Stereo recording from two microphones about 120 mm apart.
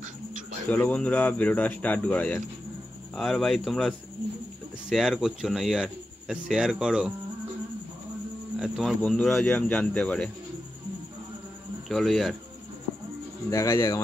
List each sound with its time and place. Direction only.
0.7 s speech: 10° left (ahead or behind)
3.2 s speech: centre (ahead or behind)
8.5 s speech: 5° right (ahead or behind)
11.9 s speech: centre (ahead or behind)
13.5 s speech: 25° left (ahead or behind)